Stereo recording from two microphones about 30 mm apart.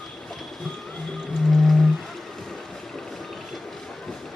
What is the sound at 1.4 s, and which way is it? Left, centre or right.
Whale vocalization, centre.